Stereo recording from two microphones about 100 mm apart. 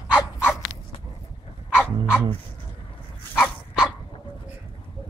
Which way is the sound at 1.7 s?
10° right (ahead or behind).